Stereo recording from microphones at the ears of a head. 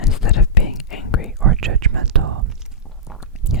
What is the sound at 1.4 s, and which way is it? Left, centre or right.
Whispering, right.